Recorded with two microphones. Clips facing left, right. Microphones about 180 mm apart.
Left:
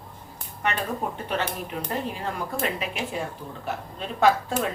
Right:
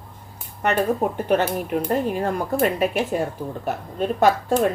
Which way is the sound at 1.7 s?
50° right (ahead or behind).